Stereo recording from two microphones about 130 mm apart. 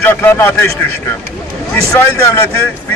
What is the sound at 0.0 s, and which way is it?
Speech, 15° left (ahead or behind).